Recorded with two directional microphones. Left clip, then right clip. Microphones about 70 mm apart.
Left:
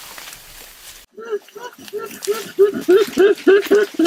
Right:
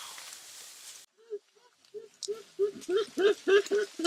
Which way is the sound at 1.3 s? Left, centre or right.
Centre.